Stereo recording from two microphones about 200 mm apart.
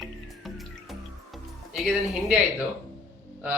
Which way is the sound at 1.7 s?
Centre (ahead or behind).